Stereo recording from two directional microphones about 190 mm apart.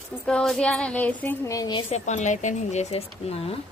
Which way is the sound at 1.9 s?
40° left (ahead or behind).